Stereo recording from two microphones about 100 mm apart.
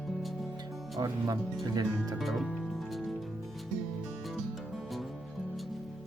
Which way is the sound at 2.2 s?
Centre (ahead or behind).